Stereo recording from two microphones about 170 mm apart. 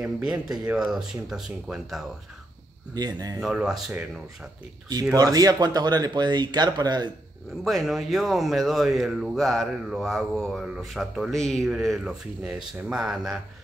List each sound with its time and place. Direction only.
0.0 s speech: 5° right (ahead or behind)
2.9 s speech: 25° right (ahead or behind)
3.3 s speech: 5° right (ahead or behind)
5.1 s speech: 20° right (ahead or behind)
7.6 s speech: centre (ahead or behind)